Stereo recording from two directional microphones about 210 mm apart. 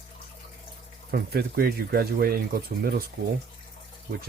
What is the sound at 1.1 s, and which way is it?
Speech, 50° right (ahead or behind).